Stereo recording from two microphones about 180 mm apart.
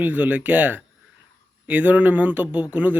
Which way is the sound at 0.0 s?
10° right (ahead or behind).